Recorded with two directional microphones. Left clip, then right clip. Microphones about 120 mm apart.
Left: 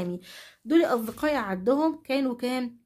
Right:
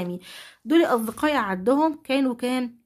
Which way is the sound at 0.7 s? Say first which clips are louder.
Right 3 dB; 30° right (ahead or behind).